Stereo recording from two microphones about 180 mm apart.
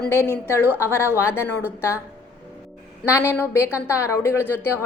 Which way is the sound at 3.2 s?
15° left (ahead or behind).